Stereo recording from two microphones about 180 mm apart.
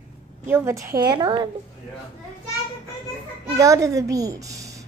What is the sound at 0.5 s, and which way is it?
A woman's voice, 15° right (ahead or behind).